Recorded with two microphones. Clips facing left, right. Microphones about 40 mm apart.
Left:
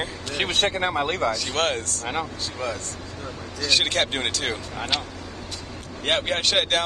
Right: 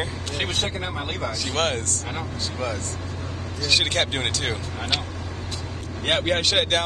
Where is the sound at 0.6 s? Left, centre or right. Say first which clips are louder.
Left 6 dB; left.